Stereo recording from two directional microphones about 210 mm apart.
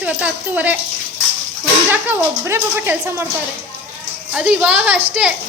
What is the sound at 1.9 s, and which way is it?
Speech, 10° right (ahead or behind).